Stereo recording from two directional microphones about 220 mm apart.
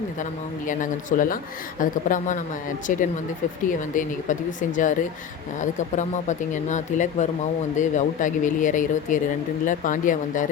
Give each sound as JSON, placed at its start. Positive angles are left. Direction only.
{"t": 0.7, "sound": "speech", "side_deg": 35}